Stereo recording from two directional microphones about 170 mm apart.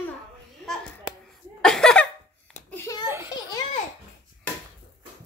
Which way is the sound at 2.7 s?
15° left (ahead or behind).